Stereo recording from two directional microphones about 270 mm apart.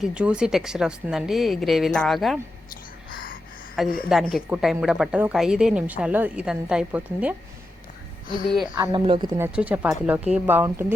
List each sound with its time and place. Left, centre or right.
0.0 s a woman's voice: centre
3.1 s a sound: left
3.8 s a woman's voice: centre
8.4 s a woman's voice: centre
8.8 s speech: centre